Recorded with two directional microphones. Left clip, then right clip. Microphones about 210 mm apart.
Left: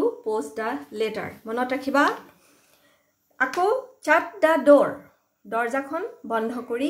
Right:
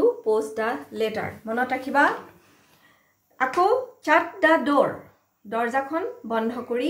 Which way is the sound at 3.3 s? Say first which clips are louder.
Right 2 dB; 50° left (ahead or behind).